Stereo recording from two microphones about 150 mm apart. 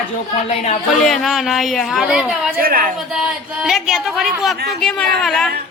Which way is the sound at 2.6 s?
75° right (ahead or behind).